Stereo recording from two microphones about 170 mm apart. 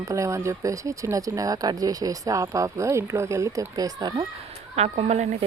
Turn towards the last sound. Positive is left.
turn(degrees=-40)  # may be behind; listen again after turning